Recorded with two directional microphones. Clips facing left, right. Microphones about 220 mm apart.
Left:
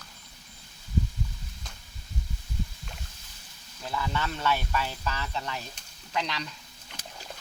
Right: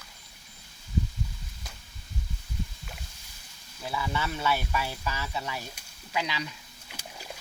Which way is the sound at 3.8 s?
10° right (ahead or behind).